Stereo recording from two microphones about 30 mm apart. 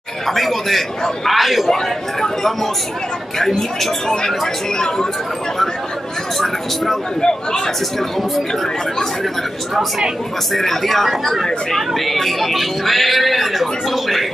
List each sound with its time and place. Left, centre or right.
0.3 s speech: centre
1.7 s speech: centre
4.7 s a man's voice: centre
6.4 s speech: centre
7.2 s a man's voice: left
10.5 s speech: centre